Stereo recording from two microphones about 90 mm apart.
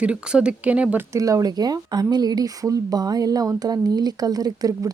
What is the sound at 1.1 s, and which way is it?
Speech, 40° right (ahead or behind).